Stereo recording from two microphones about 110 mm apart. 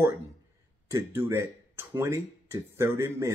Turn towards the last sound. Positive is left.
turn(degrees=-25)  # may be behind; listen again after turning